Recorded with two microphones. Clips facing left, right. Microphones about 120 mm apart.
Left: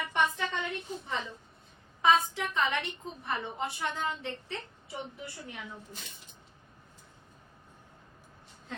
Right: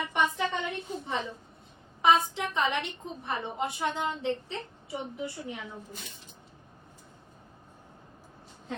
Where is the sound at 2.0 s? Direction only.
20° right (ahead or behind).